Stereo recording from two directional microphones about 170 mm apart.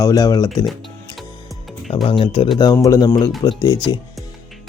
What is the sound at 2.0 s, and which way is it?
A man's voice, 30° left (ahead or behind).